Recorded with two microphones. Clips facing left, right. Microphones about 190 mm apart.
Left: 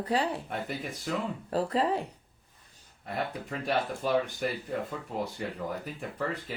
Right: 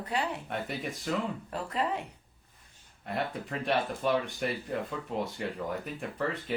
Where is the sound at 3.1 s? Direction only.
Centre (ahead or behind).